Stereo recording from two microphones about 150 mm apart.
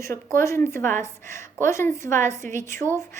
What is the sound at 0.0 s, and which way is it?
A woman's voice, 20° left (ahead or behind).